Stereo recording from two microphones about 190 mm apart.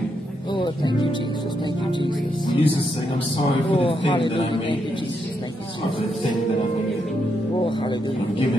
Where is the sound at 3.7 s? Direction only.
30° left (ahead or behind).